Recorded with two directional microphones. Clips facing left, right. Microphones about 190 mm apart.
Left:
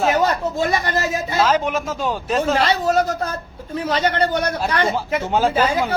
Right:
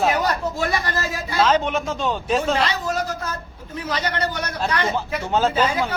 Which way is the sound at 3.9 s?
25° left (ahead or behind).